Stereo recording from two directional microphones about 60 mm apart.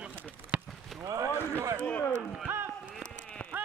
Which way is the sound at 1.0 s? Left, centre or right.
Right.